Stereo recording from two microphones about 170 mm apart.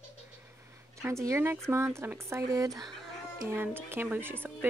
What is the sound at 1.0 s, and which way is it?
Speech, 15° right (ahead or behind).